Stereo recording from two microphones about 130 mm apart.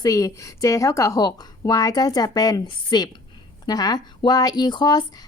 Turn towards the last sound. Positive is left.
turn(degrees=35)  # may be behind; listen again after turning